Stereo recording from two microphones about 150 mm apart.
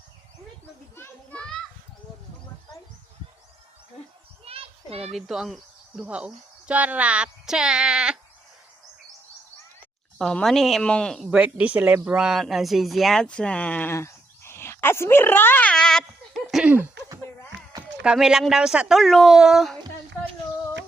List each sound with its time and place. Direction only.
0.9 s children playing: 10° left (ahead or behind)
4.4 s children playing: 40° right (ahead or behind)
5.1 s speech: 5° right (ahead or behind)
10.2 s speech: centre (ahead or behind)
18.0 s speech: 5° right (ahead or behind)